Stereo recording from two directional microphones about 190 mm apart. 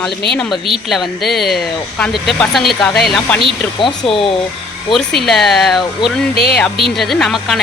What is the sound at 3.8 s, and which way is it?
Speech, 25° left (ahead or behind).